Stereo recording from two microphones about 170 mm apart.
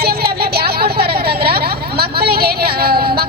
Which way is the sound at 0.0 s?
65° right (ahead or behind).